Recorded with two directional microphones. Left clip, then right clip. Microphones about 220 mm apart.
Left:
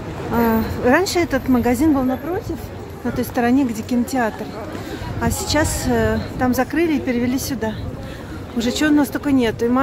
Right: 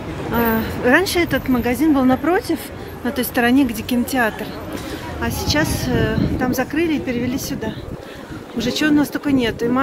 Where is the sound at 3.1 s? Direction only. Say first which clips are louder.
Right 2 dB; 5° left (ahead or behind).